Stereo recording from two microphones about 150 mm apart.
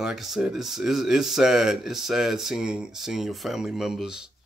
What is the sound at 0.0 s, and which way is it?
Speech, centre (ahead or behind).